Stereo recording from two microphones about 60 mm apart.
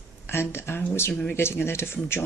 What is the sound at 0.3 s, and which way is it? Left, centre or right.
Speech, left.